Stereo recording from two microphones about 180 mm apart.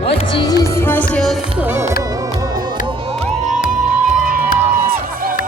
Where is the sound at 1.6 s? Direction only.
15° right (ahead or behind).